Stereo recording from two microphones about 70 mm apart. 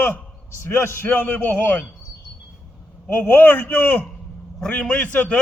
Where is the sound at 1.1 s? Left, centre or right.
Left.